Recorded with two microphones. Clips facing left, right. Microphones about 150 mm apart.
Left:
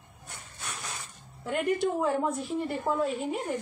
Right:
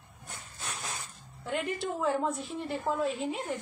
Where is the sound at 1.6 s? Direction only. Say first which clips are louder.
Left 6 dB; 50° left (ahead or behind).